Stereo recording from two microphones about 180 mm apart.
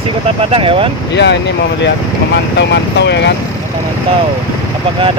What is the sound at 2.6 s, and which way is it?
Speech, 75° left (ahead or behind).